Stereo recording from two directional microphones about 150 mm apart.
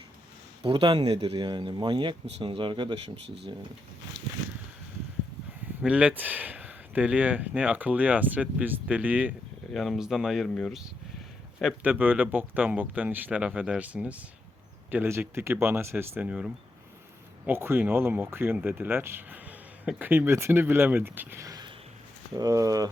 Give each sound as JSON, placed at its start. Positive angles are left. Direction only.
{"t": 0.6, "sound": "speech", "side_deg": -35}
{"t": 5.8, "sound": "speech", "side_deg": -10}
{"t": 11.8, "sound": "speech", "side_deg": -10}